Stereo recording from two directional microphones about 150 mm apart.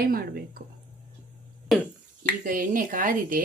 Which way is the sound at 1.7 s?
Centre (ahead or behind).